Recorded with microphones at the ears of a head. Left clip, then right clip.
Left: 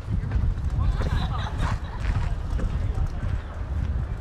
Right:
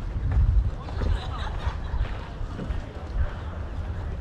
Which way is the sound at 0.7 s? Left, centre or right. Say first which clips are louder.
Left 3 dB; left.